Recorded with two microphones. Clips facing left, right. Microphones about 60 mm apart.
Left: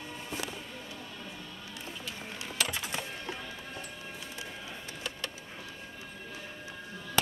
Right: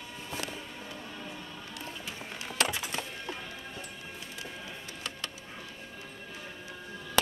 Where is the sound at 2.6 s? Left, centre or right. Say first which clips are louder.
Right 3 dB; centre.